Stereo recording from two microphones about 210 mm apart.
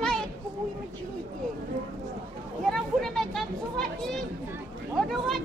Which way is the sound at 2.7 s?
Centre (ahead or behind).